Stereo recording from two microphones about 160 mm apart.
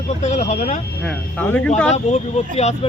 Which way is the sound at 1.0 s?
10° left (ahead or behind).